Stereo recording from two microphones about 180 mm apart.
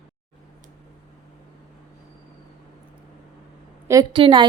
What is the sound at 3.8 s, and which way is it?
Speech, 20° right (ahead or behind).